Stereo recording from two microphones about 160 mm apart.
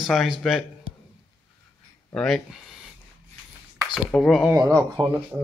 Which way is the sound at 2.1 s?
5° left (ahead or behind).